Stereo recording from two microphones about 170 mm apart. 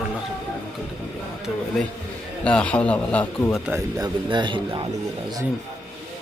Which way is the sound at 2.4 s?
5° left (ahead or behind).